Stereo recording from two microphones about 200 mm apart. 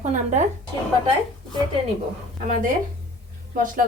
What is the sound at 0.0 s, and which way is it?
Speech, 35° right (ahead or behind).